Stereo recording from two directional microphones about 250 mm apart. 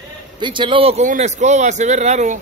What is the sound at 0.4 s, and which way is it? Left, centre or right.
Speech, centre.